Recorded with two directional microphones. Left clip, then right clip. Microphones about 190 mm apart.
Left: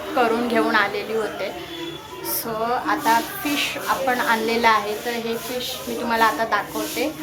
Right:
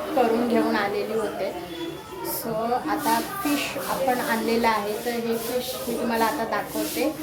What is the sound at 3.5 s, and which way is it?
A woman's voice, 5° right (ahead or behind).